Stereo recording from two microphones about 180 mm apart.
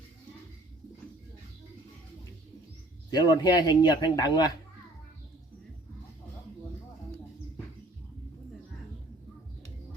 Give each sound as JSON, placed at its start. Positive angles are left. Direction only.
{"t": 3.1, "sound": "a man's voice", "side_deg": 20}